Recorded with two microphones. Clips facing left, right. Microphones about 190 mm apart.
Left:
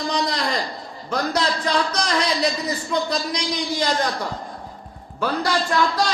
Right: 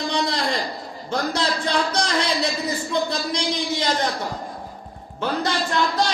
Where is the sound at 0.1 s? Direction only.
30° right (ahead or behind).